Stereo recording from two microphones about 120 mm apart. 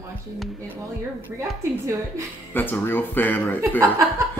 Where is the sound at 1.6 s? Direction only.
20° right (ahead or behind).